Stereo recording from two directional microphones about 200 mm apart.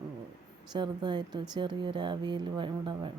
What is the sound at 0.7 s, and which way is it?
Speech, 20° right (ahead or behind).